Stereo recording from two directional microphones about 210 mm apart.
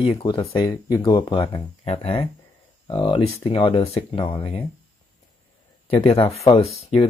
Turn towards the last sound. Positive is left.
turn(degrees=30)  # may be behind; listen again after turning